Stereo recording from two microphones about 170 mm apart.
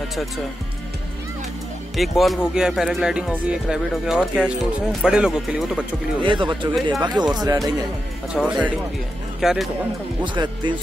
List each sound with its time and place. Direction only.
2.0 s speech: centre (ahead or behind)
6.2 s speech: 30° right (ahead or behind)
8.3 s speech: 5° right (ahead or behind)
10.2 s speech: 25° right (ahead or behind)